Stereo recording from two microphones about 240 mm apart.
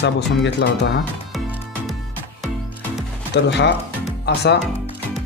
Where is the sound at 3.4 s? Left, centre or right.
Left.